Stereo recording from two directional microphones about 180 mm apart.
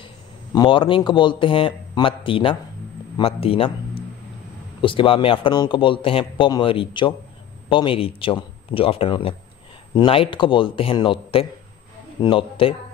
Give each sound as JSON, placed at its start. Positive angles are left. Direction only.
{"t": 0.6, "sound": "speech", "side_deg": 25}
{"t": 4.8, "sound": "speech", "side_deg": 30}